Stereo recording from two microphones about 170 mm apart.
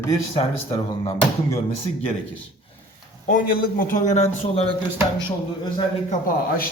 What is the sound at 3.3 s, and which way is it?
A man's voice, 55° left (ahead or behind).